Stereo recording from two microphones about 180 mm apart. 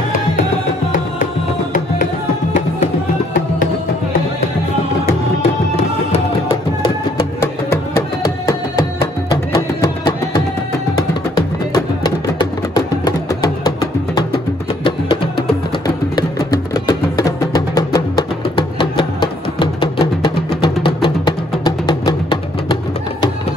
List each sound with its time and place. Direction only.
0.9 s music: 45° left (ahead or behind)
6.1 s music: 30° left (ahead or behind)
7.7 s music: 15° left (ahead or behind)
12.4 s music: 20° left (ahead or behind)
16.8 s music: 20° left (ahead or behind)